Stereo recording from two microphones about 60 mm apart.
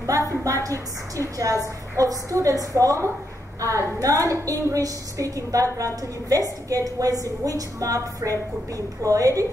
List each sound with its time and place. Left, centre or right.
0.4 s a woman's voice: right